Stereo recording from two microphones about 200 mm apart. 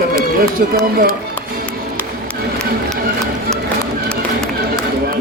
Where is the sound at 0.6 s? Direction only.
50° right (ahead or behind).